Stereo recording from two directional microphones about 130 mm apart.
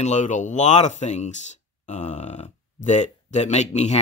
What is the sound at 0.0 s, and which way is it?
Speech, 65° left (ahead or behind).